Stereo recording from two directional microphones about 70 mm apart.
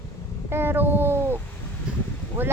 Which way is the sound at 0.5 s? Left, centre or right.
Right.